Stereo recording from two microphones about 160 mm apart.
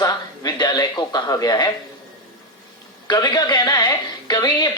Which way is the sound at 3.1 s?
25° left (ahead or behind).